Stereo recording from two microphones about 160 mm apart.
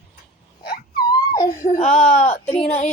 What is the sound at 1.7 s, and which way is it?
Speech, 45° left (ahead or behind).